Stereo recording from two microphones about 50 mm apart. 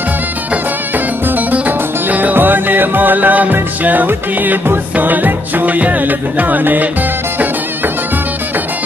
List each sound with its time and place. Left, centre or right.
0.9 s music: right